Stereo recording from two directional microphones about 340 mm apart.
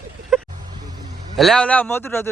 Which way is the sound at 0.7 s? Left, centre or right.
Centre.